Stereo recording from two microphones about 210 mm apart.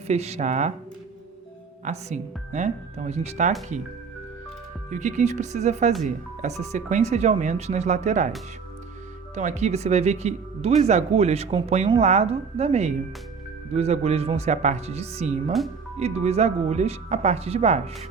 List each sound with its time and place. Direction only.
0.1 s speech: 30° right (ahead or behind)
1.8 s speech: 35° right (ahead or behind)
4.9 s speech: 35° right (ahead or behind)
9.3 s speech: 35° right (ahead or behind)